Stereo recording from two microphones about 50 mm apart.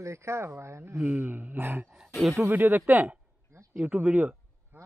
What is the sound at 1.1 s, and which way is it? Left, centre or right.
Speech, right.